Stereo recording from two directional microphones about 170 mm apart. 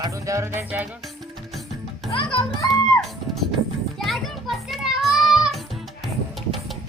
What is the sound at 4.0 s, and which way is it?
Children playing, centre (ahead or behind).